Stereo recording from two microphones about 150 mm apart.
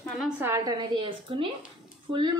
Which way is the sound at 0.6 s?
30° right (ahead or behind).